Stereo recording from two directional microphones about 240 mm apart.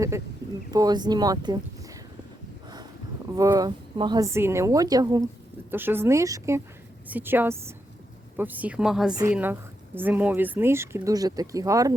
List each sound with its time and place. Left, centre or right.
0.7 s speech: centre
3.3 s a woman's voice: centre